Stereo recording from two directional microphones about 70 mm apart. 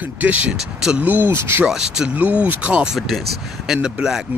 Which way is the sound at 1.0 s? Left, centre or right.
Right.